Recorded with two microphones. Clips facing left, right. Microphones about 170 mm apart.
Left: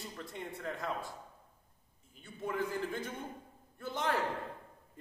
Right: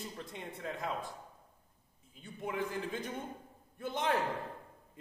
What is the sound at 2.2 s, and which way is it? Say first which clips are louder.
A man's voice: left 1 dB; 20° right (ahead or behind).